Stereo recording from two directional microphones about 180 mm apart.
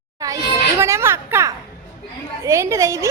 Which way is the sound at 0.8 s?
15° right (ahead or behind).